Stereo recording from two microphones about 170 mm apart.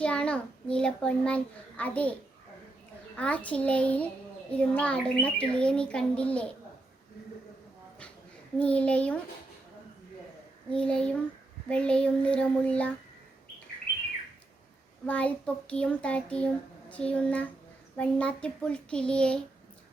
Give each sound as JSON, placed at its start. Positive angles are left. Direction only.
{"t": 0.0, "sound": "a child's voice", "side_deg": 5}
{"t": 3.2, "sound": "a child's voice", "side_deg": 10}
{"t": 8.5, "sound": "a child's voice", "side_deg": 10}
{"t": 10.7, "sound": "a child's voice", "side_deg": 5}
{"t": 15.0, "sound": "a child's voice", "side_deg": 10}